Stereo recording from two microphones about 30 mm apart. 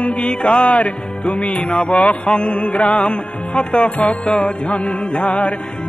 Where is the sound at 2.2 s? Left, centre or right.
Left.